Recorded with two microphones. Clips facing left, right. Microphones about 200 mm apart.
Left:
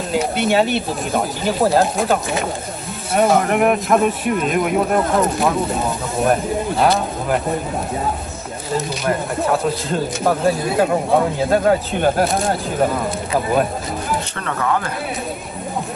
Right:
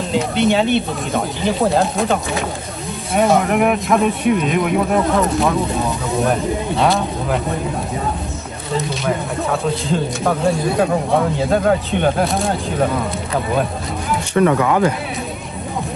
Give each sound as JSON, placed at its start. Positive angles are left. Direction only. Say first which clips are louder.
{"t": 0.1, "sound": "speech", "louder": "right 1 dB", "side_deg": 5}
{"t": 8.7, "sound": "speech", "louder": "even", "side_deg": 0}
{"t": 14.3, "sound": "speech", "louder": "right 12 dB", "side_deg": -15}